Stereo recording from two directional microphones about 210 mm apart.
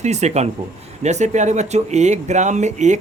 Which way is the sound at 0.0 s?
35° right (ahead or behind).